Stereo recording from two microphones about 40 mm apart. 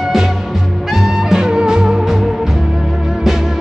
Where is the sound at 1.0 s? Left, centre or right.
Centre.